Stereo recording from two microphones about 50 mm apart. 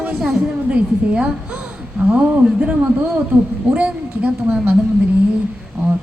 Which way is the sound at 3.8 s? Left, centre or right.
Right.